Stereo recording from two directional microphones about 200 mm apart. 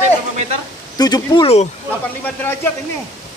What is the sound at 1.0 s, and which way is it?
Speech, 20° left (ahead or behind).